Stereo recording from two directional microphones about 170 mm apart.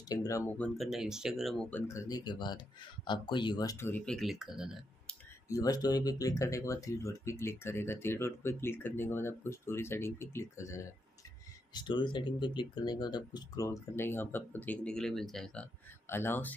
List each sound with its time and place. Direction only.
0.1 s speech: 20° left (ahead or behind)
0.6 s speech: centre (ahead or behind)
5.5 s speech: 20° left (ahead or behind)